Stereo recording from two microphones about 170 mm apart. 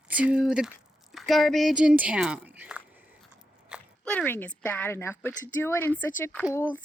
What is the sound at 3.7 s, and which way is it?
Biting, 5° right (ahead or behind).